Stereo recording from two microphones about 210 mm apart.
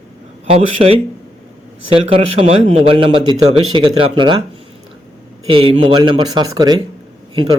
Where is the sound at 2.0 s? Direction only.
25° right (ahead or behind).